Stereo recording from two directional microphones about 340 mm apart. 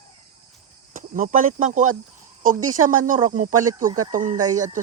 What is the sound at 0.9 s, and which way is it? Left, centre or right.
Speech, right.